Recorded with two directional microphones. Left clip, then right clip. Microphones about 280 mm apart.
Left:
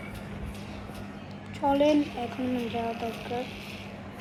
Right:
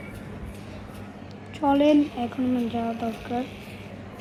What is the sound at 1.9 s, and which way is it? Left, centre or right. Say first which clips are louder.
Speech: right 4 dB; centre.